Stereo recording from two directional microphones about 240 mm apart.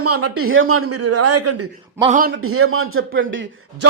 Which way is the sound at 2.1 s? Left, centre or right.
Right.